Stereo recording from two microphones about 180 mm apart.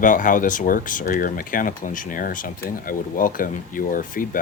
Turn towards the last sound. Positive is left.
turn(degrees=50)  # may be behind; listen again after turning